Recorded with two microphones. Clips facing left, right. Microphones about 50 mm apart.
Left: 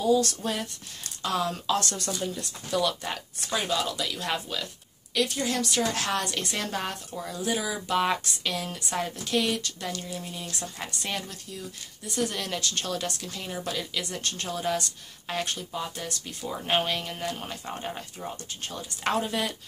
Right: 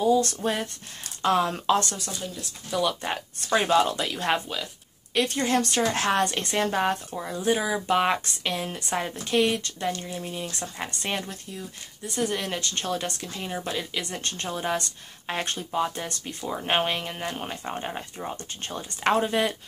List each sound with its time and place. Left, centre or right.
0.0 s a woman's voice: right
1.9 s speech: centre
2.8 s a woman's voice: right
3.3 s a woman's voice: right; by 10.5 s centre
10.6 s a woman's voice: right
14.1 s a woman's voice: right